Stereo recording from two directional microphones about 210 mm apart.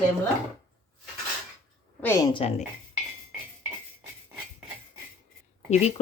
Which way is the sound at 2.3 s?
30° left (ahead or behind).